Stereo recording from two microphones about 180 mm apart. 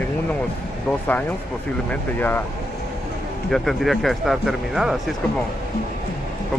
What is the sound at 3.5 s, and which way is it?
Speech, centre (ahead or behind).